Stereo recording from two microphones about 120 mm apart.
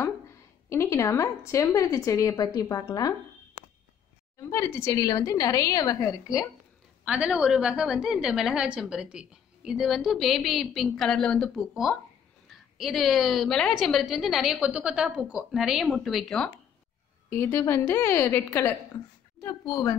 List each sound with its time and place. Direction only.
0.7 s a woman's voice: 25° left (ahead or behind)
4.4 s a woman's voice: 20° left (ahead or behind)
7.1 s a woman's voice: 10° right (ahead or behind)
17.3 s a woman's voice: 20° left (ahead or behind)